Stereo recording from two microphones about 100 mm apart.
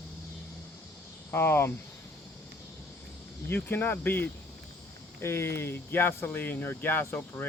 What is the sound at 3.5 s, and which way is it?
Speech, 20° left (ahead or behind).